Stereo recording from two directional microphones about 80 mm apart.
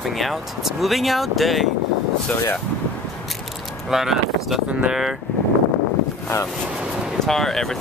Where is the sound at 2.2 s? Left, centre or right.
Centre.